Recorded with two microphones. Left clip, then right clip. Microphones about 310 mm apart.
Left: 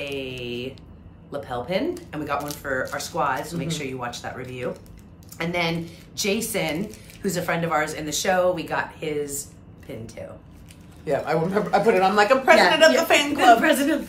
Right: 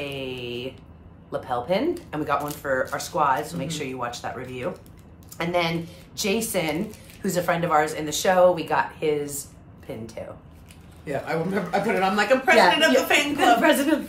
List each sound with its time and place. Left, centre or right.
0.0 s mantra: centre
1.3 s speech: centre
11.1 s speech: centre
13.4 s speech: centre